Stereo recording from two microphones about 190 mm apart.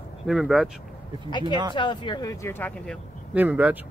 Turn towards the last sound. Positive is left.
turn(degrees=-10)  # may be behind; listen again after turning